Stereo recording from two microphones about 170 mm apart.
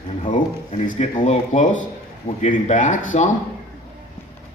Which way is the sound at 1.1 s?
40° left (ahead or behind).